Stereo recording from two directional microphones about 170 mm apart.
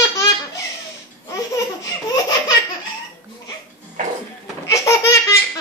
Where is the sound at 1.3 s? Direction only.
20° left (ahead or behind).